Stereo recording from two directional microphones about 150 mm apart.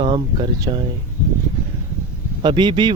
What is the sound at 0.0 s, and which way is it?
Speech, 35° right (ahead or behind).